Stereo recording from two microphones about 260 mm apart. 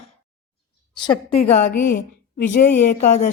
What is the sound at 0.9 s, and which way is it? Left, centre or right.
Speech, centre.